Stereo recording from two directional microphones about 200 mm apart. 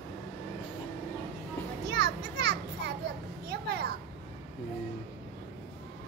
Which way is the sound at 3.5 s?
55° right (ahead or behind).